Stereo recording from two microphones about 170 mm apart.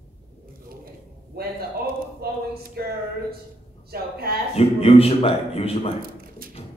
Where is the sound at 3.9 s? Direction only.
60° right (ahead or behind).